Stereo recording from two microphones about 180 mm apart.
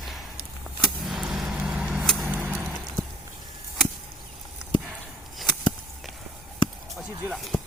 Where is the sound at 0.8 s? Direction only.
Centre (ahead or behind).